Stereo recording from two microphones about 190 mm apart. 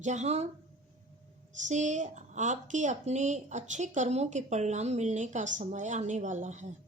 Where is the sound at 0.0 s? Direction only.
35° right (ahead or behind).